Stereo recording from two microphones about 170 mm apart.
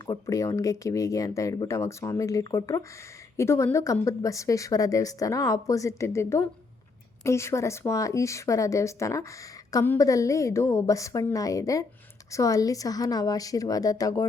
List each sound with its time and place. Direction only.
0.0 s a woman's voice: 20° left (ahead or behind)